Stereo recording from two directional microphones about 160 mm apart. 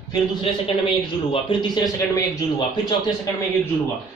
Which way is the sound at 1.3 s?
30° left (ahead or behind).